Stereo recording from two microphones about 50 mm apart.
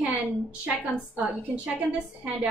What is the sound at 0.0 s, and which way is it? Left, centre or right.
A woman's voice, right.